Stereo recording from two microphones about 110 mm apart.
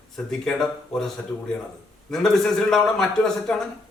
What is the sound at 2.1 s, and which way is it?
A man's voice, 5° left (ahead or behind).